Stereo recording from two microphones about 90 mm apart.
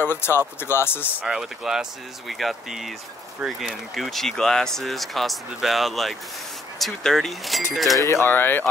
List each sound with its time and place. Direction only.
0.0 s speech: 25° left (ahead or behind)
1.2 s speech: 5° right (ahead or behind)
8.0 s speech: 30° left (ahead or behind)